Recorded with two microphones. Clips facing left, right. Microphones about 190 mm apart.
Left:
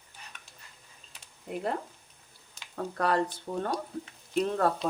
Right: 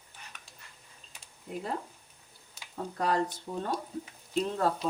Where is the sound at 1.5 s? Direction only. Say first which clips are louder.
Left 3 dB; 65° left (ahead or behind).